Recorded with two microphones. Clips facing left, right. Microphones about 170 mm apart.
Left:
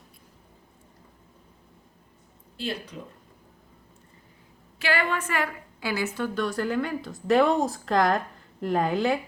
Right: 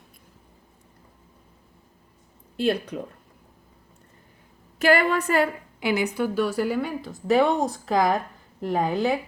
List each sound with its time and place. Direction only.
2.6 s speech: 55° right (ahead or behind)
4.8 s a woman's voice: 40° right (ahead or behind)
5.8 s speech: 20° right (ahead or behind); by 9.1 s centre (ahead or behind)